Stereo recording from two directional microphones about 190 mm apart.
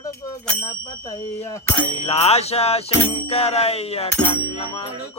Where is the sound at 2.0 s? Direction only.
35° left (ahead or behind).